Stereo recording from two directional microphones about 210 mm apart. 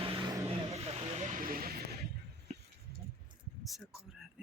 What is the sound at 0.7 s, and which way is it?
Snake, 30° right (ahead or behind).